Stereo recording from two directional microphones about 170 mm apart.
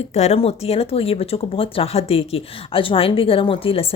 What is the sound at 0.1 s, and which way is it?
Speech, 40° left (ahead or behind).